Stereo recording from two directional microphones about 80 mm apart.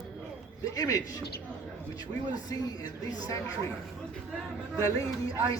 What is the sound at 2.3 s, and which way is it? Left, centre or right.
A man's voice, left.